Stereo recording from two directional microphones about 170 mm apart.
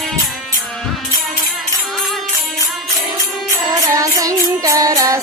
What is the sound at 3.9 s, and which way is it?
Music, 20° right (ahead or behind).